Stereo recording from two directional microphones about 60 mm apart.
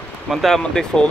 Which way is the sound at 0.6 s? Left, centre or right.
Centre.